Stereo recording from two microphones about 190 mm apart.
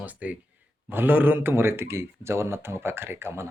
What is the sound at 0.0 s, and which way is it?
Speech, 5° right (ahead or behind).